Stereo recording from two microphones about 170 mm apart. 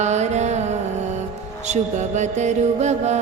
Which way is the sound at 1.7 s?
45° right (ahead or behind).